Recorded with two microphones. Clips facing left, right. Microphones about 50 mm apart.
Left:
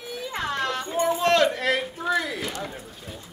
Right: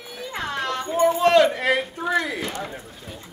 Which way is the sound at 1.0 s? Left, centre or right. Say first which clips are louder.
Right 4 dB; centre.